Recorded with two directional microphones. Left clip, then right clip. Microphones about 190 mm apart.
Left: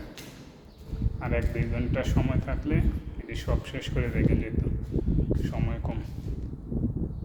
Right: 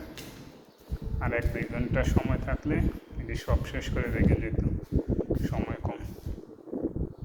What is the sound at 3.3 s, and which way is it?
Speech, 5° left (ahead or behind).